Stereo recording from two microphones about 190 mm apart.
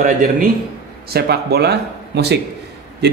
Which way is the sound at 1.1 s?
55° right (ahead or behind).